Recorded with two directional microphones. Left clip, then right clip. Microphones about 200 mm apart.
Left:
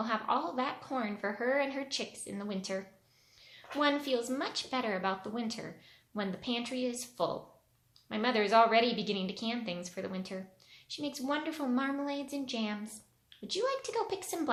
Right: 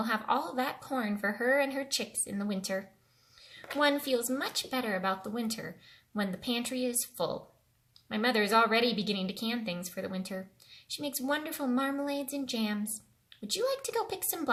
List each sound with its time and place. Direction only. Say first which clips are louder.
0.0 s speech: right 2 dB; 25° right (ahead or behind)